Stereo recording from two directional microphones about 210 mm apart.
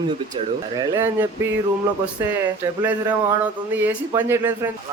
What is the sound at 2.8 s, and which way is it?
Speech, 10° right (ahead or behind).